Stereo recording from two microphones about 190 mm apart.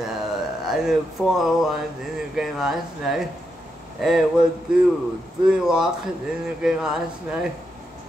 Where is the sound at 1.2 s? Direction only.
5° right (ahead or behind).